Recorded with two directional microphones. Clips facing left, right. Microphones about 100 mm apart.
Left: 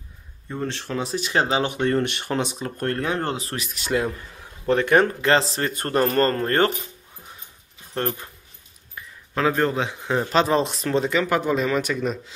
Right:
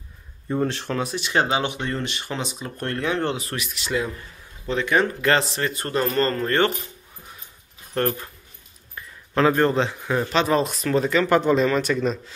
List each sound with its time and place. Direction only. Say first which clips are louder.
0.5 s speech: right 5 dB; 5° right (ahead or behind)
1.1 s speech: left 1 dB; 35° left (ahead or behind)
1.8 s speech: left 6 dB; 55° left (ahead or behind)
5.2 s speech: left 1 dB; 30° left (ahead or behind)
5.8 s speech: left 3 dB; 50° left (ahead or behind)
7.9 s speech: right 3 dB; 15° left (ahead or behind)
8.9 s a sound: right 4 dB; centre (ahead or behind)
9.8 s speech: right 1 dB; 15° left (ahead or behind)
10.3 s speech: left 1 dB; 30° left (ahead or behind)
11.1 s speech: right 6 dB; 10° left (ahead or behind)